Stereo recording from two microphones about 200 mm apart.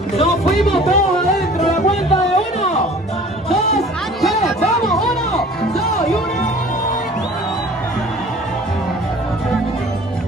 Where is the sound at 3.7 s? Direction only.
Centre (ahead or behind).